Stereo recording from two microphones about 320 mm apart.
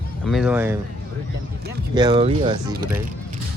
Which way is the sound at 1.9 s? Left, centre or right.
Centre.